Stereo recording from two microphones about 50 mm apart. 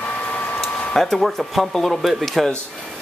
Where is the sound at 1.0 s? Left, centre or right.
Centre.